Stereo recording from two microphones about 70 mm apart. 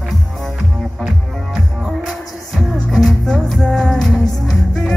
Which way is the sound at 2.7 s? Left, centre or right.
Centre.